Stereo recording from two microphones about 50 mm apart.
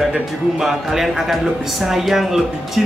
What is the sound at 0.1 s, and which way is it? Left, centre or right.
A man's voice, centre.